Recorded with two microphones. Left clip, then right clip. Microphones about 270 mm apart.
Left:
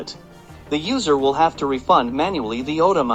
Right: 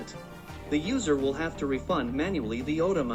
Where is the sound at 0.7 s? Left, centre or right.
Centre.